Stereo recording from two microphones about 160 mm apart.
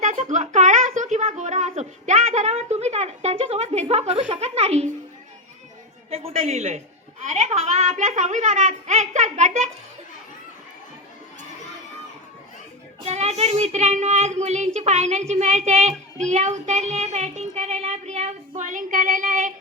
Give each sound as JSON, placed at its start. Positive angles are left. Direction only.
{"t": 0.0, "sound": "speech", "side_deg": -50}
{"t": 6.1, "sound": "a woman's voice", "side_deg": -40}
{"t": 13.0, "sound": "a woman's voice", "side_deg": -45}